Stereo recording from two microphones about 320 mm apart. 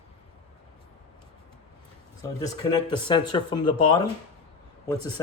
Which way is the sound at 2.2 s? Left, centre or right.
Centre.